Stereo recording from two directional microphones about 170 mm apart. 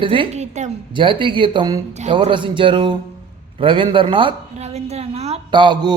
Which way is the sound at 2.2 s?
30° right (ahead or behind).